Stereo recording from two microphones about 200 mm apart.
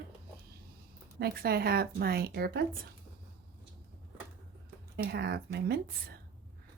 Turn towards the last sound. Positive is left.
turn(degrees=-55)  # may be behind; listen again after turning